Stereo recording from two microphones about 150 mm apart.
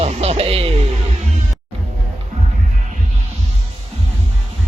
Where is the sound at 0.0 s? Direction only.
45° right (ahead or behind).